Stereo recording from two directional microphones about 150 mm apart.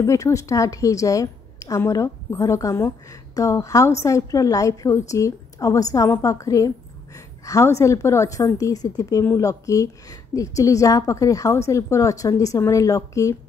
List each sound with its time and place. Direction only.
0.0 s a woman's voice: 20° left (ahead or behind)